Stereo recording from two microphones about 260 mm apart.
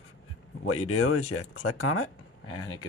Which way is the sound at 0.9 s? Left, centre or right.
Left.